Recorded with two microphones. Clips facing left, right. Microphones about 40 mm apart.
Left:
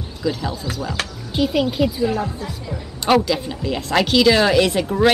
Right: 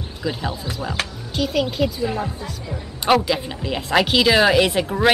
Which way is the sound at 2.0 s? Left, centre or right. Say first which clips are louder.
Left 3 dB; centre.